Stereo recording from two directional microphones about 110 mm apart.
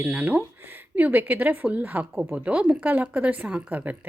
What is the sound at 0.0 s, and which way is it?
Speech, 15° right (ahead or behind).